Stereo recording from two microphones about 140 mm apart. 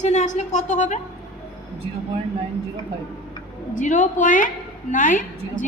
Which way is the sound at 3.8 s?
65° left (ahead or behind).